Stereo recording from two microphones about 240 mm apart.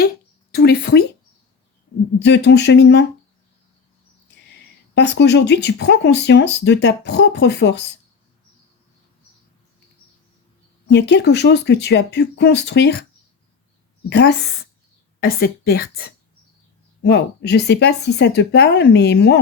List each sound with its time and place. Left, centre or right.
0.5 s speech: left
2.1 s speech: left
4.9 s speech: left
10.8 s speech: left
14.1 s a woman's voice: left